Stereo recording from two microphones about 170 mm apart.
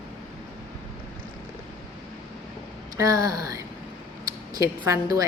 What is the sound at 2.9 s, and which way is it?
Speech, 20° right (ahead or behind).